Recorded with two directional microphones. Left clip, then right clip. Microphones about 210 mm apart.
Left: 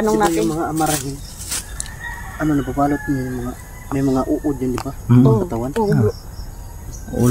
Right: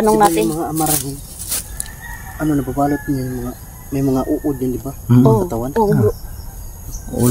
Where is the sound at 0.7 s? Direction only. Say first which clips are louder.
Left 1 dB; 30° right (ahead or behind).